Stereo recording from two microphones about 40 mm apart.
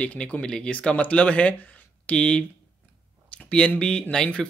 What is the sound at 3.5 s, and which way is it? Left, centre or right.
Speech, left.